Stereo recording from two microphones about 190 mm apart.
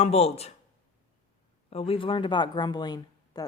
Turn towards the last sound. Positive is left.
turn(degrees=20)  # may be behind; listen again after turning